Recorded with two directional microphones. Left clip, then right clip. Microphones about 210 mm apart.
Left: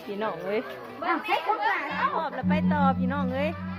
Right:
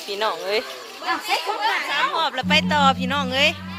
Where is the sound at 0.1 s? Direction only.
40° right (ahead or behind).